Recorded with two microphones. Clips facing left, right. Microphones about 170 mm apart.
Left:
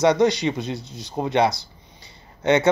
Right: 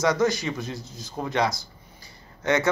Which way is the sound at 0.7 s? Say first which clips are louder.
Left 3 dB; 70° left (ahead or behind).